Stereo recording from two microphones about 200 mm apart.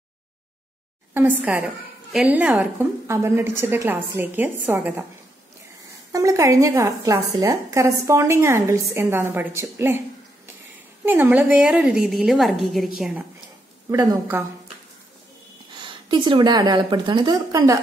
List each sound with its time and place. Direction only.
1.1 s a woman's voice: 10° right (ahead or behind)
6.1 s a woman's voice: 15° right (ahead or behind); by 13.2 s centre (ahead or behind)
13.8 s a woman's voice: 15° right (ahead or behind)
15.8 s a woman's voice: 25° right (ahead or behind)